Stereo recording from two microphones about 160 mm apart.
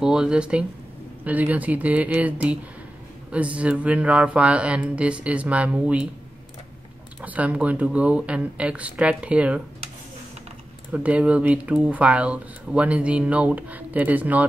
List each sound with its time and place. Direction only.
0.0 s speech: 5° right (ahead or behind)
7.2 s speech: 10° right (ahead or behind)
10.9 s speech: 10° right (ahead or behind)